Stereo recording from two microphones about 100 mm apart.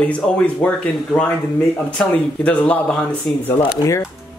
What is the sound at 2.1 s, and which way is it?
Speech, 15° left (ahead or behind).